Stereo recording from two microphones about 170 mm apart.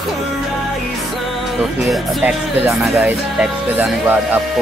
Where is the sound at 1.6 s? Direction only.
Centre (ahead or behind).